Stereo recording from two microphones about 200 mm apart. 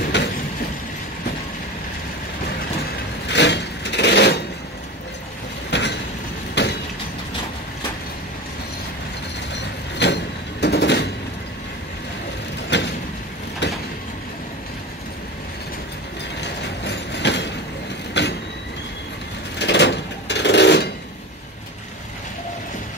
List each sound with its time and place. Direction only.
0.0 s a sound: 60° left (ahead or behind)
3.3 s a sound: 60° left (ahead or behind)
5.7 s train: 60° left (ahead or behind)
6.6 s vehicle: 60° left (ahead or behind)
9.5 s a sound: 60° left (ahead or behind)
12.6 s vehicle: 60° left (ahead or behind)
16.3 s train: 60° left (ahead or behind)
18.2 s vehicle: 60° left (ahead or behind)
19.6 s sewing machine: 60° left (ahead or behind)